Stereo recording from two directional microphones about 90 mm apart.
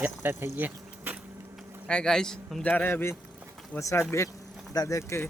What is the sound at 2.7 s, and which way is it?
Speech, 25° left (ahead or behind).